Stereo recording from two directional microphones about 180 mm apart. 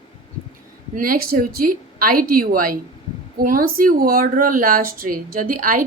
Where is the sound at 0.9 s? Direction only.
50° right (ahead or behind).